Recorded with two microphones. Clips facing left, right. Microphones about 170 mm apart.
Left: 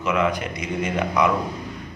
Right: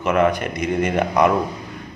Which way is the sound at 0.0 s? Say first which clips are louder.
Right 4 dB; 55° right (ahead or behind).